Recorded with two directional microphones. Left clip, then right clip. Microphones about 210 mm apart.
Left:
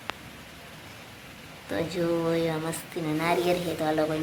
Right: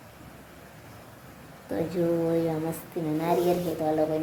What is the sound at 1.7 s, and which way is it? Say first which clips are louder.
Speech: right 1 dB; 20° right (ahead or behind).